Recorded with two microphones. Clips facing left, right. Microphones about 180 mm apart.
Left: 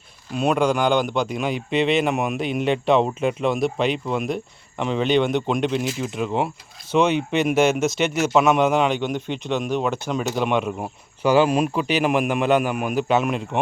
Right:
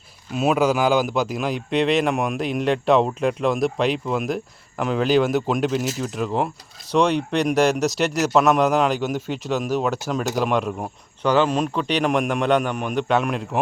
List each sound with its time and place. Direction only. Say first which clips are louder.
0.3 s speech: right 1 dB; 5° right (ahead or behind)